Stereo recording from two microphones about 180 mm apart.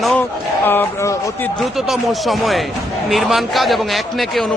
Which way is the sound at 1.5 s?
Centre (ahead or behind).